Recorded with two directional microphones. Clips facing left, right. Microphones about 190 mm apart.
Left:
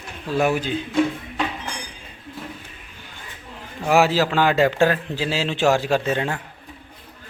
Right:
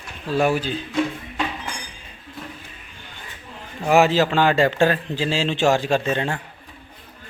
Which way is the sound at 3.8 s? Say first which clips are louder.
Right 1 dB; centre (ahead or behind).